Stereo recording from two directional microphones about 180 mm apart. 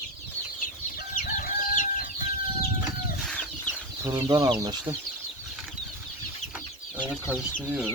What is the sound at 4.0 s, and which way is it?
Speech, 20° right (ahead or behind).